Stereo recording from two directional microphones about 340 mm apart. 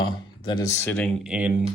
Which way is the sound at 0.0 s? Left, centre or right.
Centre.